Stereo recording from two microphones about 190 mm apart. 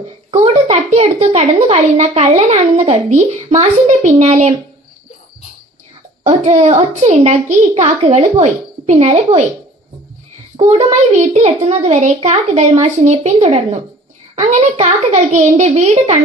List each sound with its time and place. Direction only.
0.3 s a woman's voice: 35° right (ahead or behind)
6.2 s a child's voice: 35° right (ahead or behind)
10.7 s a child's voice: 35° right (ahead or behind)